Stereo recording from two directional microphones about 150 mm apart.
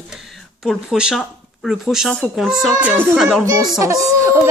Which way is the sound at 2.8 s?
15° right (ahead or behind).